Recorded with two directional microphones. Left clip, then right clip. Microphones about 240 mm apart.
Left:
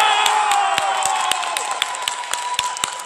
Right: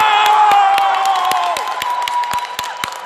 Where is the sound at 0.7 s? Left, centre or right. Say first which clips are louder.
Right 6 dB; right.